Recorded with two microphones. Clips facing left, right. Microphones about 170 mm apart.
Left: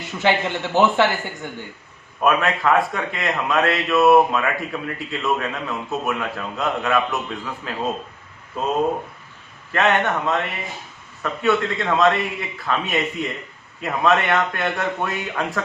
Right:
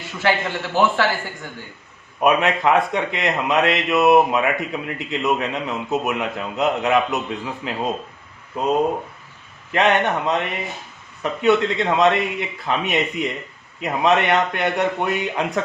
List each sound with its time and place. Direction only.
0.2 s speech: 20° left (ahead or behind)
2.2 s a man's voice: 20° right (ahead or behind)
9.7 s a man's voice: 20° right (ahead or behind)